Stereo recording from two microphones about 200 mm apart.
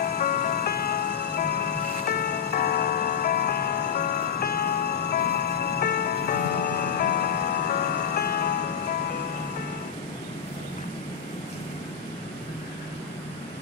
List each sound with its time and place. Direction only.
0.0 s music: 50° left (ahead or behind)